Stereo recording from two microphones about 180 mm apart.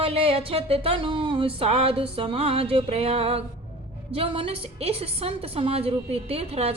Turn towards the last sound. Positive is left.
turn(degrees=-35)  # may be behind; listen again after turning